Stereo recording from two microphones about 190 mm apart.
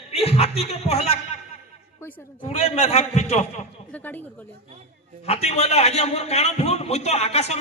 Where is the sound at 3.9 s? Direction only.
10° left (ahead or behind).